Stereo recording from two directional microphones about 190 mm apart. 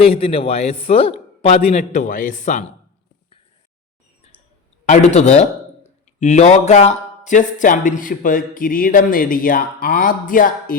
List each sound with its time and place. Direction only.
0.0 s a man's voice: 30° left (ahead or behind)
4.9 s a man's voice: 35° left (ahead or behind)